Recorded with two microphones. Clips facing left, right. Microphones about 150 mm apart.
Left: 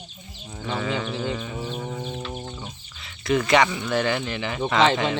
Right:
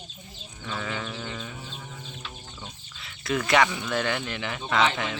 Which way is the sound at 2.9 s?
Centre (ahead or behind).